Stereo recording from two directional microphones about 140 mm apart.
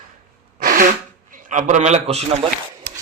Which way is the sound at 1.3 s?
65° right (ahead or behind).